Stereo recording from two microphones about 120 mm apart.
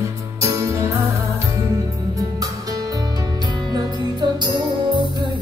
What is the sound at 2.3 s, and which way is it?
Music, 30° right (ahead or behind).